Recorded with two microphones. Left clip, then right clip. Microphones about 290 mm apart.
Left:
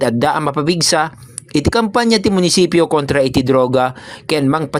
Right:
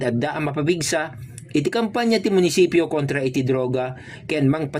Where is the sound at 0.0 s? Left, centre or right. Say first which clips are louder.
Left 9 dB; left.